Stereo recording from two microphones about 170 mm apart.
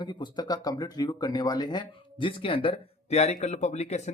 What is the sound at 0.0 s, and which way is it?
Speech, 25° left (ahead or behind).